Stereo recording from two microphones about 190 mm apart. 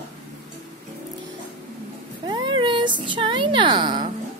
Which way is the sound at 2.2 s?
25° right (ahead or behind).